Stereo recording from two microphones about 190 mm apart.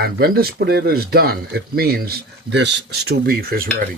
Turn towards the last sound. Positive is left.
turn(degrees=-50)  # may be behind; listen again after turning